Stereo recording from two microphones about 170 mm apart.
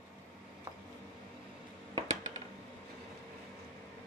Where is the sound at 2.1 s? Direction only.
40° right (ahead or behind).